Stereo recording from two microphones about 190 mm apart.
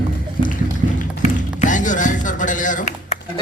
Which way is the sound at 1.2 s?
40° left (ahead or behind).